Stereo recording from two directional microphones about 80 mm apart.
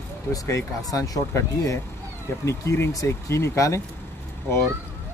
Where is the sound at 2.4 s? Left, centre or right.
Left.